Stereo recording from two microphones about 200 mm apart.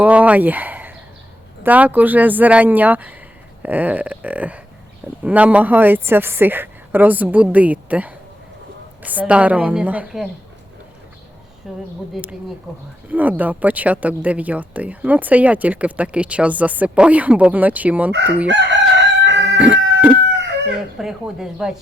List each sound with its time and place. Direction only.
0.0 s speech: 5° right (ahead or behind)
11.6 s speech: centre (ahead or behind)
18.1 s chicken: 60° right (ahead or behind)
18.4 s crowing: 60° right (ahead or behind)
19.5 s chicken: 5° right (ahead or behind)
20.3 s chicken: 60° right (ahead or behind)
21.0 s speech: centre (ahead or behind)